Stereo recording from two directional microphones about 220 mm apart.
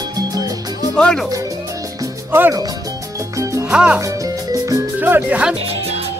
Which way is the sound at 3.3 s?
15° right (ahead or behind).